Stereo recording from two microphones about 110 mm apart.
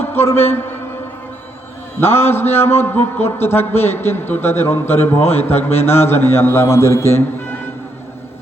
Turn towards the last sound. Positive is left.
turn(degrees=25)  # may be behind; listen again after turning